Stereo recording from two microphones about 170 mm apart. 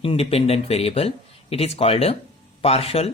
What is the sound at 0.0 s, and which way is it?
Speech, 35° left (ahead or behind).